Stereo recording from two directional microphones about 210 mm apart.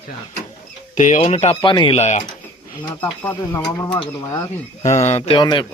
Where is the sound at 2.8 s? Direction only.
10° left (ahead or behind).